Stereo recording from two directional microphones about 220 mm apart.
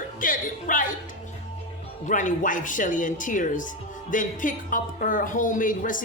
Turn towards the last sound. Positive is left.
turn(degrees=35)  # may be behind; listen again after turning